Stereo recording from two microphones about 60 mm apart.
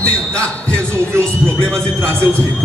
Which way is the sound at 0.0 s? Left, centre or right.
Centre.